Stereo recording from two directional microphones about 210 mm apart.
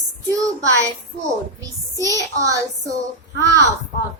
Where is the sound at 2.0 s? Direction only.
15° right (ahead or behind).